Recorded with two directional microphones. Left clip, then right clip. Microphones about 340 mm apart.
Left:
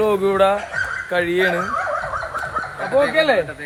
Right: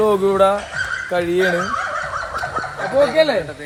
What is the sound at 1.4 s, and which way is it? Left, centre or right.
Turkey, centre.